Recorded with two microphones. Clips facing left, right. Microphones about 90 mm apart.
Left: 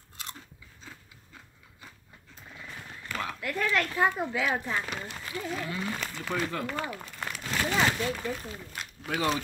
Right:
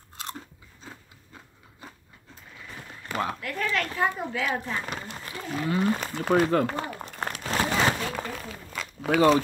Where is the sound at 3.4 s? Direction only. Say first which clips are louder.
Even; 5° left (ahead or behind).